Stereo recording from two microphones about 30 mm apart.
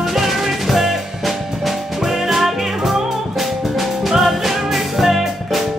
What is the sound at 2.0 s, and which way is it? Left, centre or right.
Music, centre.